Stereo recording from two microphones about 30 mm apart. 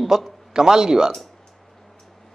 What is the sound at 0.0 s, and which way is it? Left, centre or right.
Speech, centre.